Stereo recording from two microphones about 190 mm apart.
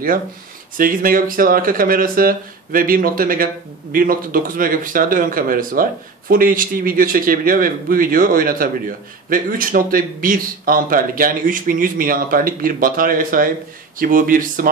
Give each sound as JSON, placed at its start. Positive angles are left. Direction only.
{"t": 0.7, "sound": "speech", "side_deg": -50}